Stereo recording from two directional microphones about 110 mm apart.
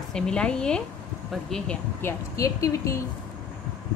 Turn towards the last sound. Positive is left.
turn(degrees=30)  # may be behind; listen again after turning